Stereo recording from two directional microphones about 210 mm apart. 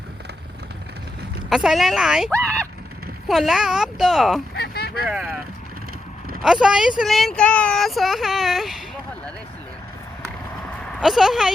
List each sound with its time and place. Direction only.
1.5 s speech: centre (ahead or behind)
4.5 s a sound: 50° left (ahead or behind)
5.0 s speech: 5° right (ahead or behind)
6.4 s speech: 5° right (ahead or behind)
11.0 s speech: centre (ahead or behind)